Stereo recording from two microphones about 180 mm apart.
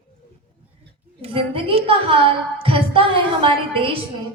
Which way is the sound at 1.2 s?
30° right (ahead or behind).